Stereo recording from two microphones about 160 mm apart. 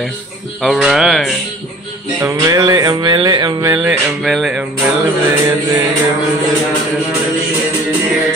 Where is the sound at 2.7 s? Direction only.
25° right (ahead or behind).